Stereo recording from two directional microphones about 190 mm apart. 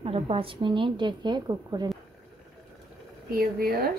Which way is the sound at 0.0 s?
30° right (ahead or behind).